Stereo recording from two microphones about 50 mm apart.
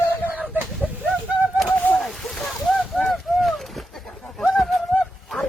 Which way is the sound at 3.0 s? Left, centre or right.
Centre.